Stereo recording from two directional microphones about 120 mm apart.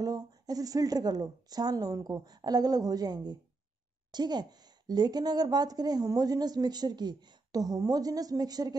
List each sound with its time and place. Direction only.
0.0 s a woman's voice: 30° right (ahead or behind)